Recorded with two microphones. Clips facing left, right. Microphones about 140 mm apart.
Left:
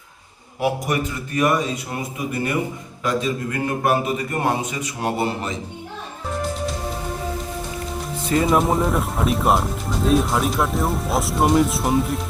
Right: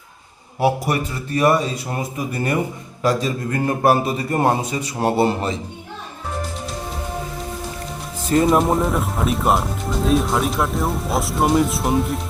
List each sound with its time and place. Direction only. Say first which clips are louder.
0.6 s a man's voice: right 2 dB; 35° right (ahead or behind)
3.0 s a man's voice: right 2 dB; 35° right (ahead or behind)
8.2 s speech: right 2 dB; centre (ahead or behind)